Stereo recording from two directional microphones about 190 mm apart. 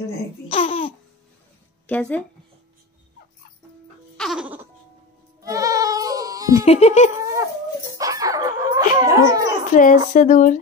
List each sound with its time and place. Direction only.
0.5 s babbling: 30° left (ahead or behind)
1.9 s speech: 5° left (ahead or behind)
4.2 s music: 5° right (ahead or behind)
5.4 s bleat: 15° right (ahead or behind)
6.6 s giggle: 35° left (ahead or behind)
7.2 s dog: 15° right (ahead or behind)
8.0 s a sound: 20° right (ahead or behind)
9.3 s a child's voice: 20° right (ahead or behind)
9.7 s speech: 45° left (ahead or behind)